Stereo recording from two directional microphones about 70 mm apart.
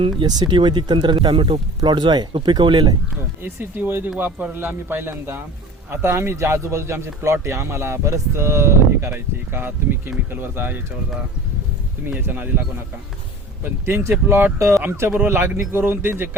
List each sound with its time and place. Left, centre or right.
0.3 s speech: right
3.4 s speech: right
12.2 s speech: right
13.8 s speech: right
14.6 s speech: right